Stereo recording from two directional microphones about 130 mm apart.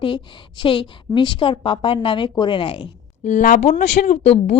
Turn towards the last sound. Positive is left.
turn(degrees=55)  # may be behind; listen again after turning